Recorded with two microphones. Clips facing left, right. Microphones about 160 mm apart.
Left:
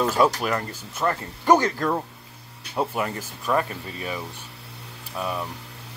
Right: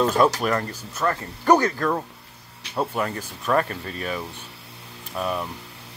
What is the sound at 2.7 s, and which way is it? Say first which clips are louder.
Speech: even; 10° left (ahead or behind).